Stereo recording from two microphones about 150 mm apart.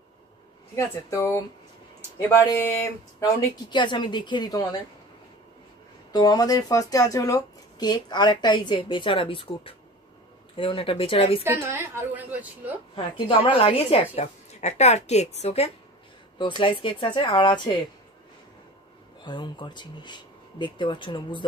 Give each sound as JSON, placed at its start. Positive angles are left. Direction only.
{"t": 0.7, "sound": "speech", "side_deg": 20}
{"t": 6.1, "sound": "speech", "side_deg": 25}
{"t": 11.4, "sound": "a woman's voice", "side_deg": -15}
{"t": 12.9, "sound": "a woman's voice", "side_deg": 35}
{"t": 19.2, "sound": "speech", "side_deg": 30}